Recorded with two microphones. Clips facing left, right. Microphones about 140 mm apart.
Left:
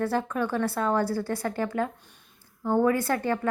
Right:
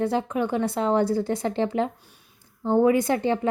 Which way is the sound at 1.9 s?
10° right (ahead or behind).